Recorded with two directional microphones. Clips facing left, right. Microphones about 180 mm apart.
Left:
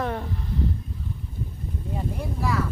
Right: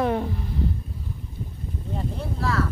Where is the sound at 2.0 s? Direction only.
15° left (ahead or behind).